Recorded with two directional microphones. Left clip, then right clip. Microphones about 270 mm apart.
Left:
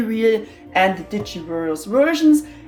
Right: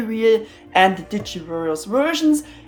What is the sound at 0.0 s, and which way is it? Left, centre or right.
Speech, centre.